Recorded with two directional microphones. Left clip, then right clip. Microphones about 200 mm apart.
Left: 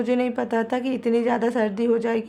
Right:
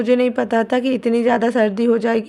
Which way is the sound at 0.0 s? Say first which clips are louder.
Right 7 dB; 20° right (ahead or behind).